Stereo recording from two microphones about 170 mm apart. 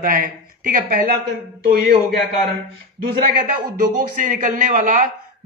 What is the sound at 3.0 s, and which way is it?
Speech, 60° right (ahead or behind).